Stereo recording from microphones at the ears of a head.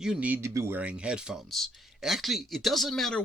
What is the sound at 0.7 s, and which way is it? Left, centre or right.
Speech, centre.